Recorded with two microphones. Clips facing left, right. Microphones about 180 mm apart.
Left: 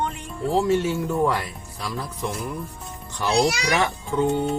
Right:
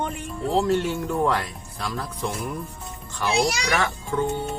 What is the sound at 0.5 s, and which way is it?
Speech, centre (ahead or behind).